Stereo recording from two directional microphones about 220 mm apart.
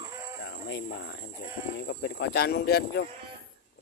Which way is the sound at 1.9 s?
50° left (ahead or behind).